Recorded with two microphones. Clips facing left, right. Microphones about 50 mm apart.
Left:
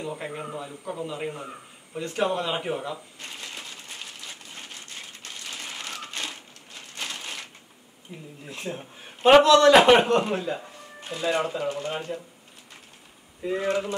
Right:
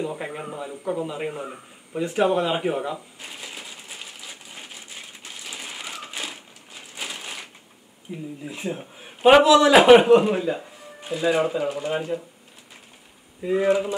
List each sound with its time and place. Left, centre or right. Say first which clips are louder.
0.0 s a sound: right 3 dB; centre
8.1 s speech: right 8 dB; centre
8.5 s a man's voice: right 2 dB; centre
13.4 s speech: right 5 dB; centre